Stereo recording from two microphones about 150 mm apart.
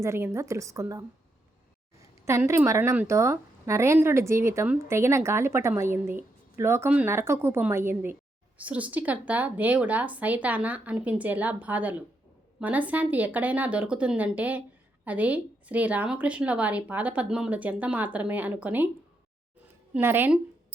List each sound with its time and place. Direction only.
0.0 s a woman's voice: 20° right (ahead or behind)
20.0 s speech: 15° right (ahead or behind)